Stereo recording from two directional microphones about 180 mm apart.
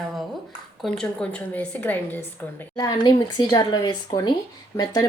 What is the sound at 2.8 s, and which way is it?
Speech, 25° left (ahead or behind).